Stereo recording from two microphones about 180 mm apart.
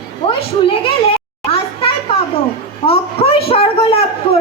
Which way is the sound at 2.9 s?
30° left (ahead or behind).